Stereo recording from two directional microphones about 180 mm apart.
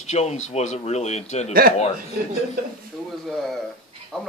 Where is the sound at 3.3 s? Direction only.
Centre (ahead or behind).